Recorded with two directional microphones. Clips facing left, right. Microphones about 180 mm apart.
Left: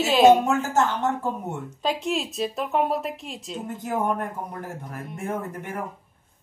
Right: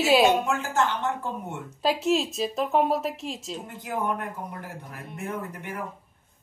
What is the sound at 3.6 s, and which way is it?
Speech, 45° left (ahead or behind).